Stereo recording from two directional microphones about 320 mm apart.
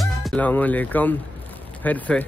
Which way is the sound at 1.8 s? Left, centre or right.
Centre.